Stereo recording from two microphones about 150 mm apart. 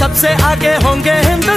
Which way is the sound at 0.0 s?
Centre (ahead or behind).